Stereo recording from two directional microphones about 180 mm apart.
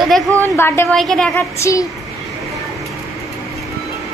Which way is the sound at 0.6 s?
15° left (ahead or behind).